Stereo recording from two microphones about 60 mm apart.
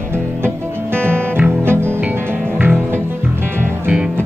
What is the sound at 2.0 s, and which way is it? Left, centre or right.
Music, right.